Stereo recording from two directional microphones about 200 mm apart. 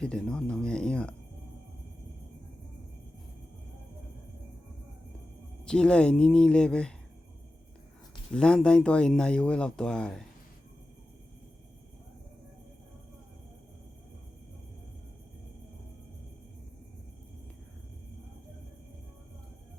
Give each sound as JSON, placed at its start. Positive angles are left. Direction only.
{"t": 0.0, "sound": "speech", "side_deg": 5}
{"t": 5.6, "sound": "speech", "side_deg": 5}
{"t": 8.3, "sound": "speech", "side_deg": 5}